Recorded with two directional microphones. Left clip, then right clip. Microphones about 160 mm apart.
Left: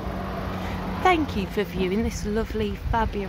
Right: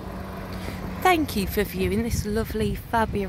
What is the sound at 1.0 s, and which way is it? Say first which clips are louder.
Speech: even; 25° right (ahead or behind).